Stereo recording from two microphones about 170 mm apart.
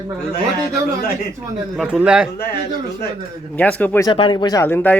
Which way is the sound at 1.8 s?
5° right (ahead or behind).